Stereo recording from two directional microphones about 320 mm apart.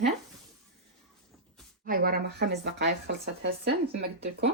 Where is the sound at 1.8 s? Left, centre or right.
Right.